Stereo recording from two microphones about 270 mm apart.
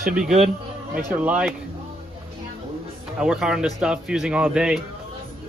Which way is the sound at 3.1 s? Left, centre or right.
Centre.